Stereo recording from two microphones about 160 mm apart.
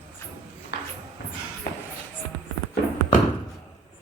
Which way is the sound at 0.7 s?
90° left.